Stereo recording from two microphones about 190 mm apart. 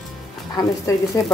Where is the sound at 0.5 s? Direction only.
15° left (ahead or behind).